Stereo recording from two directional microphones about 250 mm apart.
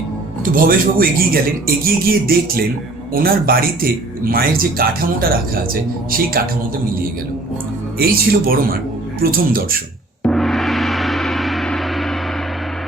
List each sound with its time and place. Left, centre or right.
0.5 s speech: right
7.9 s speech: right
10.2 s gong: centre